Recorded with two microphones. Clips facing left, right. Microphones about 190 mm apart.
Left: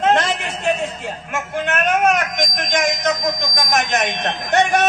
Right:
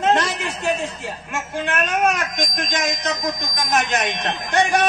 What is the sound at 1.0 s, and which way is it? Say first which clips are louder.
Speech: left 3 dB; 55° left (ahead or behind).